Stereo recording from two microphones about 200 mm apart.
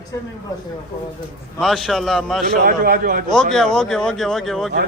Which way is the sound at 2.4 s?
50° right (ahead or behind).